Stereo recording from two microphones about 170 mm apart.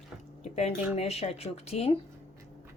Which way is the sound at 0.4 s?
40° left (ahead or behind).